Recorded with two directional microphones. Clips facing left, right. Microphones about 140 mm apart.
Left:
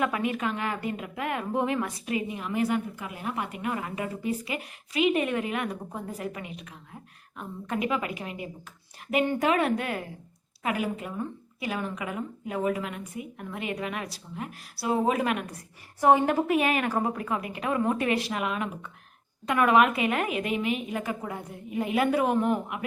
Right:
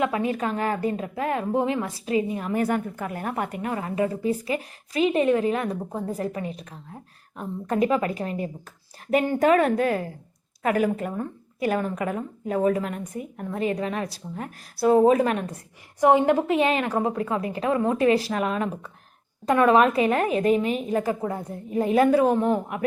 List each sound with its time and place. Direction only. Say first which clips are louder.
0.0 s a woman's voice: right 3 dB; 30° right (ahead or behind)
2.4 s a woman's voice: right 3 dB; 45° right (ahead or behind)
15.5 s a woman's voice: right 3 dB; 20° right (ahead or behind); by 22.8 s 35° right (ahead or behind)